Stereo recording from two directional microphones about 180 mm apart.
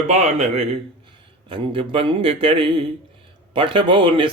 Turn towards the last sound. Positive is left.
turn(degrees=-30)  # may be behind; listen again after turning